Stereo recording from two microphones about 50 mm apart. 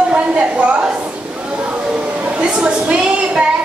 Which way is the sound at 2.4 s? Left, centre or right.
Right.